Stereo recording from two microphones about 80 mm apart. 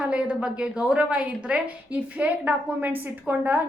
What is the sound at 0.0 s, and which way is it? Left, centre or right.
A woman's voice, centre.